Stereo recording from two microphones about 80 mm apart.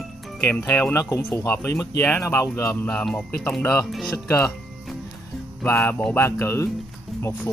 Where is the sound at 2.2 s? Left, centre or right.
Left.